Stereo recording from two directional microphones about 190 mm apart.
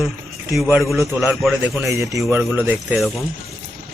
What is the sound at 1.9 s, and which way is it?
Speech, 15° right (ahead or behind).